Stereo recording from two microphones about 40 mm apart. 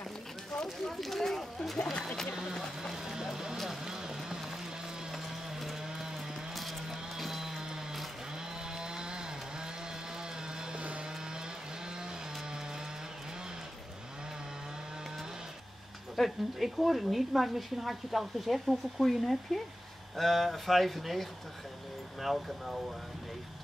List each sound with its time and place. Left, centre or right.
0.7 s a woman's voice: centre
2.8 s a woman's voice: centre
3.8 s vehicle: centre
5.1 s a sound: centre
6.9 s music: centre
8.7 s chainsaw: centre
10.6 s vehicle: right
16.2 s a woman's voice: centre